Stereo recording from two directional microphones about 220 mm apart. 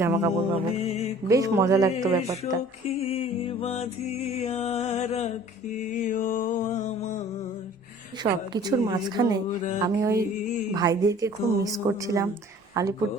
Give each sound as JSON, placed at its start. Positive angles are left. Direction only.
{"t": 0.0, "sound": "a woman's voice", "side_deg": -10}
{"t": 0.8, "sound": "music", "side_deg": 30}
{"t": 1.3, "sound": "a woman's voice", "side_deg": -15}
{"t": 2.9, "sound": "music", "side_deg": 30}
{"t": 8.2, "sound": "a woman's voice", "side_deg": -20}
{"t": 10.4, "sound": "music", "side_deg": 35}
{"t": 10.8, "sound": "a woman's voice", "side_deg": -15}